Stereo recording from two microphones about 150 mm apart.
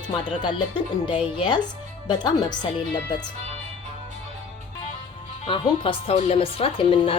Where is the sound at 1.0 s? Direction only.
30° left (ahead or behind).